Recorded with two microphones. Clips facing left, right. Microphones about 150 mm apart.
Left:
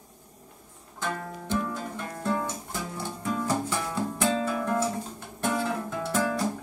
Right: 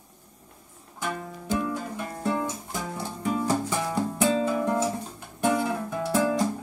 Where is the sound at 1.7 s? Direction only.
15° right (ahead or behind).